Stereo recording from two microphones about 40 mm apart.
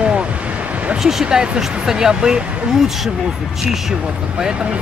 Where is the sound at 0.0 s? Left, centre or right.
Right.